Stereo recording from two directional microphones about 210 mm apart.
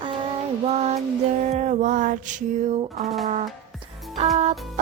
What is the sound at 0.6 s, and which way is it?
Music, 30° right (ahead or behind).